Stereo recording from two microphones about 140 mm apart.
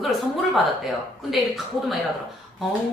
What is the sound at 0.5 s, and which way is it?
A woman's voice, centre (ahead or behind).